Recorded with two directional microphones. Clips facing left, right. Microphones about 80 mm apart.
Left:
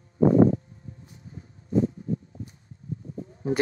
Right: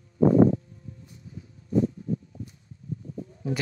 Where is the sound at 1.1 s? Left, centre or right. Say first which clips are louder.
Right 1 dB; left.